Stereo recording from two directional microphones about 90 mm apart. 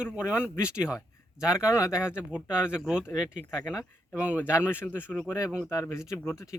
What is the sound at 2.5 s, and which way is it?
Speech, 10° right (ahead or behind).